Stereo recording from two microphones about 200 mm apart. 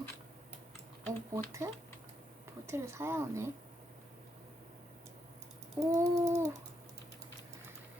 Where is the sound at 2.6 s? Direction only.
15° right (ahead or behind).